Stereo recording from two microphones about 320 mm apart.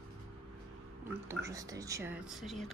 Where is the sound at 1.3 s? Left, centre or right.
Centre.